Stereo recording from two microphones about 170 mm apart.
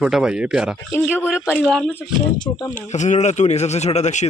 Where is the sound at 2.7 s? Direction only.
45° left (ahead or behind).